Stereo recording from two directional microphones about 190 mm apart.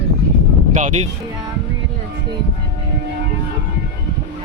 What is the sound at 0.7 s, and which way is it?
Speech, 40° right (ahead or behind).